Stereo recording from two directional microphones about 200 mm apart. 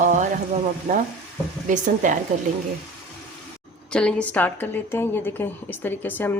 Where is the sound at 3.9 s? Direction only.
5° left (ahead or behind).